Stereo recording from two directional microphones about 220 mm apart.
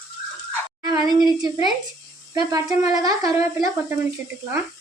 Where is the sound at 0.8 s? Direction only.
15° right (ahead or behind).